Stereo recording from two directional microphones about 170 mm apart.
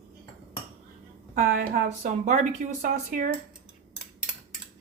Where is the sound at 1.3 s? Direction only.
55° right (ahead or behind).